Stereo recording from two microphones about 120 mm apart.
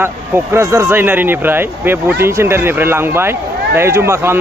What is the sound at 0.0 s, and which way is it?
Speech, 20° right (ahead or behind).